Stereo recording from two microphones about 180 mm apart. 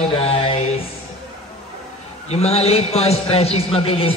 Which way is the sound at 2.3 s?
35° left (ahead or behind).